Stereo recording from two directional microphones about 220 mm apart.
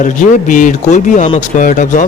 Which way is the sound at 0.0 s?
35° left (ahead or behind).